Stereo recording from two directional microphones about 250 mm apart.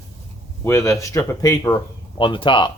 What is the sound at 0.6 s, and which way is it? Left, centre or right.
Speech, centre.